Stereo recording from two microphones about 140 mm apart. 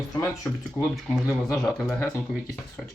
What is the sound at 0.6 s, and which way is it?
Speech, centre (ahead or behind).